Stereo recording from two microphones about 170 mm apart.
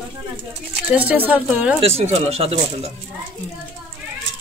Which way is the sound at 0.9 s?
10° right (ahead or behind).